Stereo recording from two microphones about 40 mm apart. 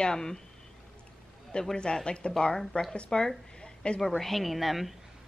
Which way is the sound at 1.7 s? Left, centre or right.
Left.